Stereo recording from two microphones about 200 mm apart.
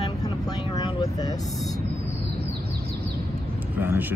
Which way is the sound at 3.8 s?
10° right (ahead or behind).